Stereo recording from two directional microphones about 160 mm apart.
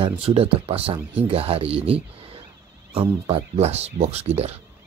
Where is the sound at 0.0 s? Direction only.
35° right (ahead or behind).